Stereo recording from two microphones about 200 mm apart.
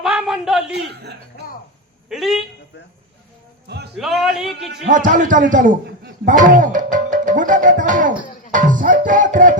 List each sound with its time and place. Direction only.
0.0 s a sound: centre (ahead or behind)
1.3 s a sound: 45° left (ahead or behind)
2.0 s a man's voice: centre (ahead or behind)
3.9 s a man's voice: centre (ahead or behind)
4.9 s a man's voice: 40° right (ahead or behind)
8.5 s music: 40° right (ahead or behind)